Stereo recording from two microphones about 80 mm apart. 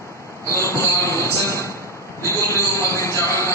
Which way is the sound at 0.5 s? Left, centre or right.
Left.